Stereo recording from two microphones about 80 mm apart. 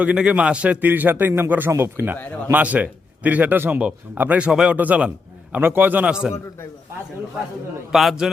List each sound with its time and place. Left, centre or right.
0.0 s a man's voice: centre
6.1 s a man's voice: centre
7.9 s a man's voice: centre